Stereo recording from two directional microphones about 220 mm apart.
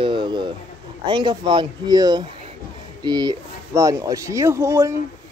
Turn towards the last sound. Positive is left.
turn(degrees=-15)  # may be behind; listen again after turning